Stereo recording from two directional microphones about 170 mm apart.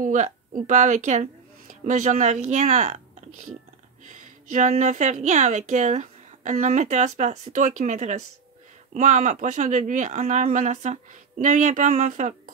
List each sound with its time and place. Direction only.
0.0 s a woman's voice: 50° right (ahead or behind)
4.1 s a woman's voice: 50° right (ahead or behind)